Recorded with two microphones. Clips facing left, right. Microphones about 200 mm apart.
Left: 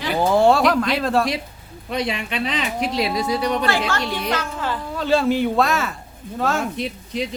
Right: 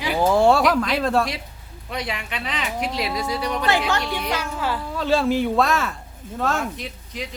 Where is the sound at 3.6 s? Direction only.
20° right (ahead or behind); by 6.6 s centre (ahead or behind).